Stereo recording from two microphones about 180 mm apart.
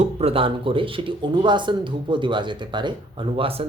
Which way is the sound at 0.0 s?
35° right (ahead or behind).